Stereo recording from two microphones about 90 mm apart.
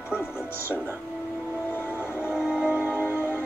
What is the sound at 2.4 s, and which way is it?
Music, 15° right (ahead or behind).